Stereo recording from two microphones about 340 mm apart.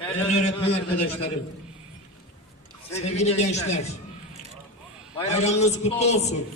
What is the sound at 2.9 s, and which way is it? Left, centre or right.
Speech, centre.